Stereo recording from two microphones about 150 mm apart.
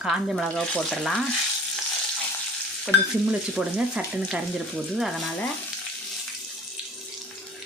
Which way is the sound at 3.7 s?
5° right (ahead or behind).